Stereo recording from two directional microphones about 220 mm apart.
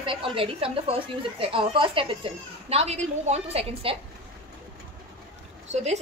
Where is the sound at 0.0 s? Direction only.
25° right (ahead or behind).